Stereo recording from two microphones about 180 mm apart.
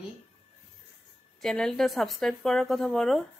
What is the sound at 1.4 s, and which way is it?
A woman's voice, 5° left (ahead or behind).